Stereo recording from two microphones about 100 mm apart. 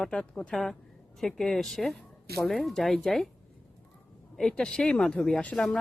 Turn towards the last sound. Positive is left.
turn(degrees=10)  # may be behind; listen again after turning